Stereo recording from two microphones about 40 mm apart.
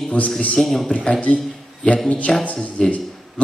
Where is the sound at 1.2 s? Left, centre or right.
Left.